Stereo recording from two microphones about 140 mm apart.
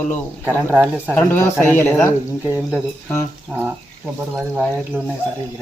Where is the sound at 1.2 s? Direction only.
15° left (ahead or behind).